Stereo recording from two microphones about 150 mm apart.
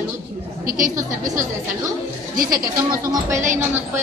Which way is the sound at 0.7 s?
65° right (ahead or behind).